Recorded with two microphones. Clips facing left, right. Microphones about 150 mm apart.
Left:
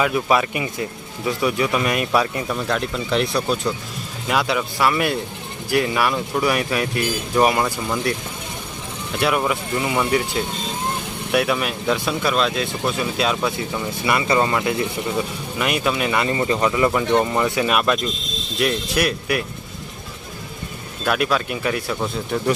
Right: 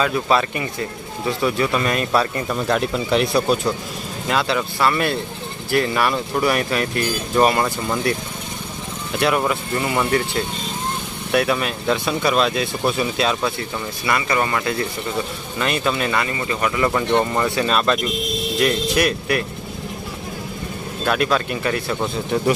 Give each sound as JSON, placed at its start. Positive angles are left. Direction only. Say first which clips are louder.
{"t": 0.0, "sound": "speech", "louder": "even", "side_deg": 15}
{"t": 2.6, "sound": "speech", "louder": "right 3 dB", "side_deg": -5}
{"t": 4.3, "sound": "speech", "louder": "even", "side_deg": 5}
{"t": 9.2, "sound": "speech", "louder": "right 1 dB", "side_deg": 5}
{"t": 14.1, "sound": "speech", "louder": "left 2 dB", "side_deg": 20}
{"t": 16.2, "sound": "speech", "louder": "left 3 dB", "side_deg": 30}
{"t": 16.9, "sound": "speech", "louder": "even", "side_deg": 10}
{"t": 18.9, "sound": "speech", "louder": "right 2 dB", "side_deg": 5}
{"t": 21.0, "sound": "speech", "louder": "right 1 dB", "side_deg": 5}